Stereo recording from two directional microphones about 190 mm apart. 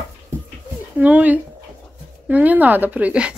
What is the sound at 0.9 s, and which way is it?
Speech, 10° right (ahead or behind).